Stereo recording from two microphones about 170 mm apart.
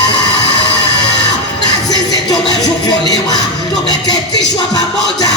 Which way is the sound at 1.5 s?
25° left (ahead or behind).